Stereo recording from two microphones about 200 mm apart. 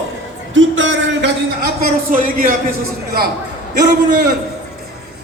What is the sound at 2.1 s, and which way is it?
Speech, 45° right (ahead or behind).